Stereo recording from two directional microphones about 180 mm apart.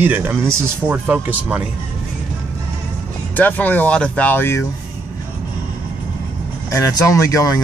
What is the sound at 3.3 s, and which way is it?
Speech, 10° left (ahead or behind).